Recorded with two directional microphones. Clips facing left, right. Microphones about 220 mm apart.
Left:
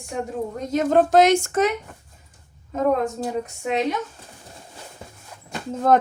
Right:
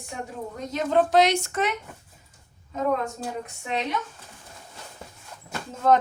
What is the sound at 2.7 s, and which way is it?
Speech, 50° left (ahead or behind).